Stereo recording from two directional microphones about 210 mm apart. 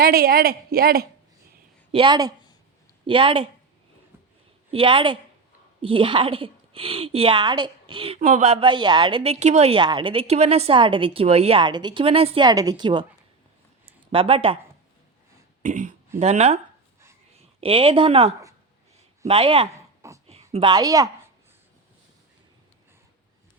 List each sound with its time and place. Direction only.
0.0 s a woman's voice: 45° right (ahead or behind)
1.9 s a woman's voice: 25° right (ahead or behind)
4.7 s a woman's voice: 25° right (ahead or behind)
14.1 s a woman's voice: 25° right (ahead or behind)
15.6 s speech: 35° right (ahead or behind)
17.6 s a woman's voice: 25° right (ahead or behind)
19.7 s a sound: 15° right (ahead or behind)
20.2 s a woman's voice: 30° right (ahead or behind)